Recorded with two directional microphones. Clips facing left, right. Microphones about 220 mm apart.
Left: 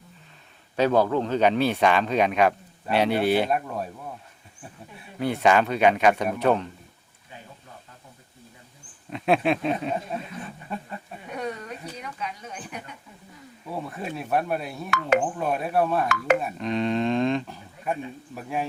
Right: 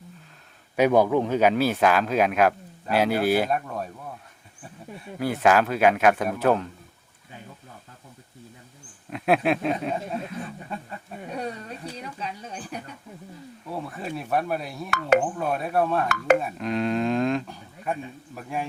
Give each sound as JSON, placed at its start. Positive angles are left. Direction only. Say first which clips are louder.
{"t": 0.8, "sound": "speech", "louder": "right 2 dB", "side_deg": -15}
{"t": 5.2, "sound": "speech", "louder": "even", "side_deg": -5}
{"t": 9.0, "sound": "speech", "louder": "even", "side_deg": -5}
{"t": 11.3, "sound": "a sound", "louder": "left 1 dB", "side_deg": -30}
{"t": 13.7, "sound": "speech", "louder": "even", "side_deg": 0}
{"t": 16.1, "sound": "speech", "louder": "right 4 dB", "side_deg": -45}
{"t": 16.4, "sound": "speech", "louder": "even", "side_deg": 0}